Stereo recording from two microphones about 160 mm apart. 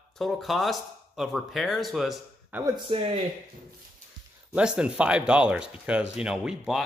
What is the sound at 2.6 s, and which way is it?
Speech, 35° right (ahead or behind).